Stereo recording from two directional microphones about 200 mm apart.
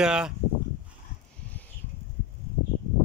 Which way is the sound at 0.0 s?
5° right (ahead or behind).